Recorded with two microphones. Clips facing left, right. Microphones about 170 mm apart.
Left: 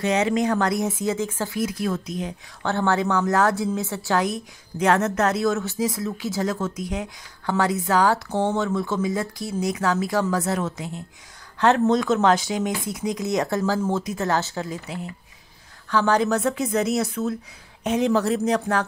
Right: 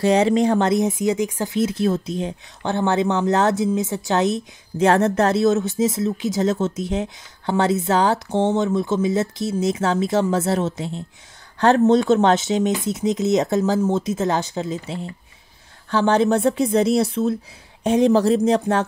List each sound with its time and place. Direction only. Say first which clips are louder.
0.0 s a woman's voice: right 5 dB; 30° right (ahead or behind)
11.5 s a sound: right 3 dB; 35° right (ahead or behind)
11.8 s a woman's voice: right 4 dB; 30° right (ahead or behind)